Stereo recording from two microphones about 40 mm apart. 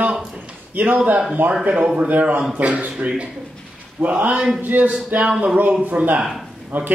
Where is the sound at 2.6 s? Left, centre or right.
Right.